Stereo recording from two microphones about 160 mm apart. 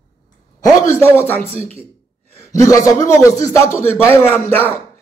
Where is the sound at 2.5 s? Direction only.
20° left (ahead or behind).